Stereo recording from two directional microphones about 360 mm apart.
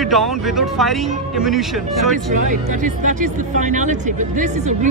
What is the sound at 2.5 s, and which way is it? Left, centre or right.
Speech, right.